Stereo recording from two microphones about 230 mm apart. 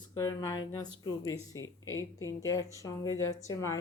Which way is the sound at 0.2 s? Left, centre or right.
Centre.